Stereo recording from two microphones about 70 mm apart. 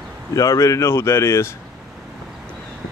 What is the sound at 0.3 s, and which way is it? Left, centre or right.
Speech, left.